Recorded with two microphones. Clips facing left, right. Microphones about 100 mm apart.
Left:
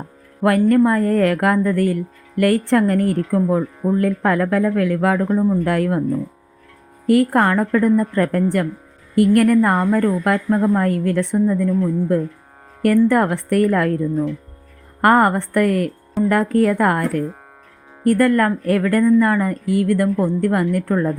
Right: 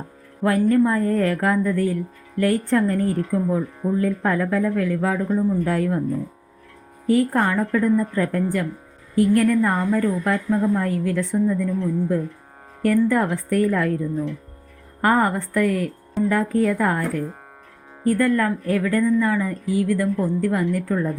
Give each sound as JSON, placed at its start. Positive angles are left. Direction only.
{"t": 0.4, "sound": "speech", "side_deg": 70}
{"t": 7.1, "sound": "speech", "side_deg": 75}